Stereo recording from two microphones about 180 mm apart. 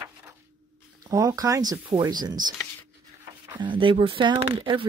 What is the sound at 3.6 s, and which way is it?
Speech, 25° right (ahead or behind).